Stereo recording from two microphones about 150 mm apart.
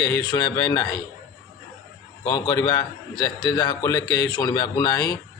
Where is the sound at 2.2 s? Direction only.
30° left (ahead or behind).